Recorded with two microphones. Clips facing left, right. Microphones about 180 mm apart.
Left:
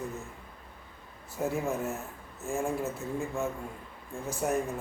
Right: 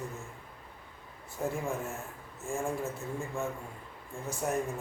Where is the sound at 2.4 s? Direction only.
Centre (ahead or behind).